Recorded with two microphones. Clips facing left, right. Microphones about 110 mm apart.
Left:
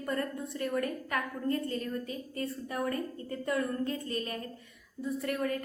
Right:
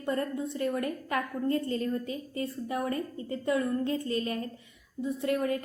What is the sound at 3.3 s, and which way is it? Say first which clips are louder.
Speech: right 4 dB; 50° left (ahead or behind).